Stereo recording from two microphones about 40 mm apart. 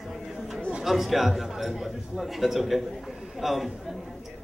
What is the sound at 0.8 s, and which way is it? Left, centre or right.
A man's voice, centre.